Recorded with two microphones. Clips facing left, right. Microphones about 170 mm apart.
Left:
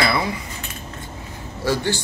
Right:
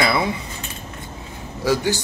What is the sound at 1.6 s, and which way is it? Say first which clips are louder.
Speech: right 2 dB; 10° right (ahead or behind).